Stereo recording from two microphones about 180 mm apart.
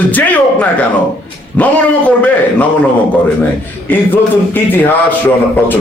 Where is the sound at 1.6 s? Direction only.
10° left (ahead or behind).